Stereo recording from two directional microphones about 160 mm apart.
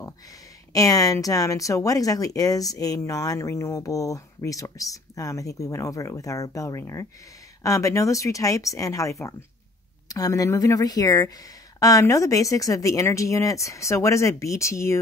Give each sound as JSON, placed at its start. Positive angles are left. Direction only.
{"t": 0.7, "sound": "speech", "side_deg": 20}